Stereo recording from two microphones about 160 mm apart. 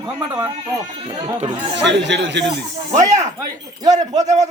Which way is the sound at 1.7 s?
90° right.